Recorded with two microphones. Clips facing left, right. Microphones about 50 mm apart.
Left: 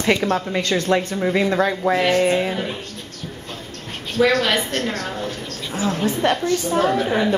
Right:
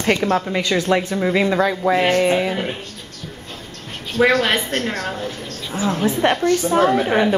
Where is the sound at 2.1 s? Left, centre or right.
Centre.